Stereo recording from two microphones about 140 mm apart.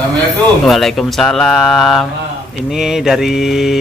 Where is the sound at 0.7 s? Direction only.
Centre (ahead or behind).